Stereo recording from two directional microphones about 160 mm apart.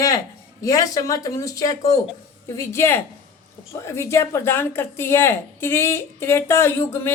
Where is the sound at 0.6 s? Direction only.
20° left (ahead or behind).